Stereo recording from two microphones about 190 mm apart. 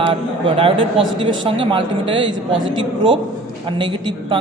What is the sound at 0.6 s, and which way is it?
Speech, 30° right (ahead or behind).